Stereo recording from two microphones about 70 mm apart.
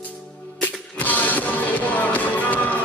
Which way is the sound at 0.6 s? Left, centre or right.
Left.